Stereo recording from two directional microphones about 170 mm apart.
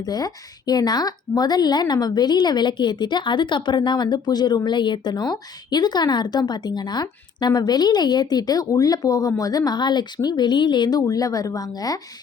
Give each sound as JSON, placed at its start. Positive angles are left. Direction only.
{"t": 0.0, "sound": "a woman's voice", "side_deg": 20}